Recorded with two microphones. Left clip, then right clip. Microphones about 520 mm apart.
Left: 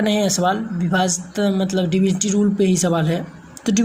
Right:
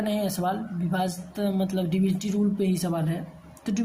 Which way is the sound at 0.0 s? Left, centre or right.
Right.